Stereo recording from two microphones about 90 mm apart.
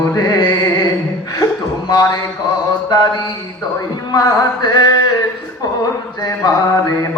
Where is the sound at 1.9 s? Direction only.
45° left (ahead or behind).